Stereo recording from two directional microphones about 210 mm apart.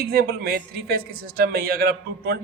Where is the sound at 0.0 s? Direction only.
45° right (ahead or behind).